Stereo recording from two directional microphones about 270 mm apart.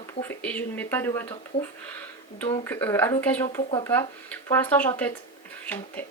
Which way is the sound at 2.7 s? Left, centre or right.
Centre.